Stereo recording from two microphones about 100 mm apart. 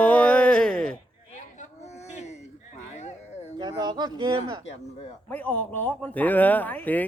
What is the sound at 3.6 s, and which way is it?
Speech, 50° right (ahead or behind).